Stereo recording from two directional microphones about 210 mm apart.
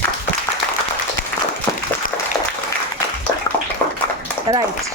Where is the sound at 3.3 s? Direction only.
15° left (ahead or behind).